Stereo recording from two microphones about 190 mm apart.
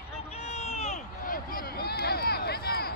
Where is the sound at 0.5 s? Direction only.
35° left (ahead or behind).